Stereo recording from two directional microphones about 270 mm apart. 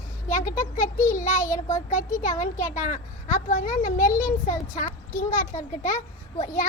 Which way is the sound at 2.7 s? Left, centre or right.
Left.